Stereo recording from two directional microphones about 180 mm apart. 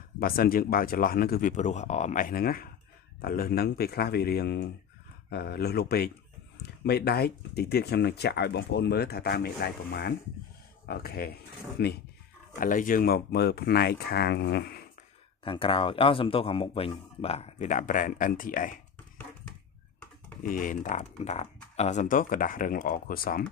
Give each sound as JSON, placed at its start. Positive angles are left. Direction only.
{"t": 0.2, "sound": "speech", "side_deg": 55}
{"t": 12.5, "sound": "speech", "side_deg": 50}
{"t": 15.4, "sound": "speech", "side_deg": 30}
{"t": 20.4, "sound": "speech", "side_deg": 50}